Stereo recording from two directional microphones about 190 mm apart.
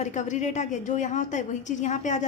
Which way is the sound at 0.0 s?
40° left (ahead or behind).